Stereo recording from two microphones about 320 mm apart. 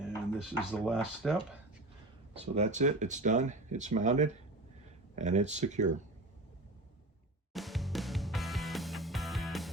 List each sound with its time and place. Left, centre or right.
0.3 s speech: centre
2.4 s speech: right
7.5 s music: centre